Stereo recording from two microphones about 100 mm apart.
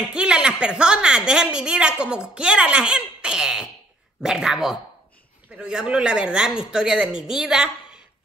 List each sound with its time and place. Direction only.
0.1 s a woman's voice: 10° right (ahead or behind)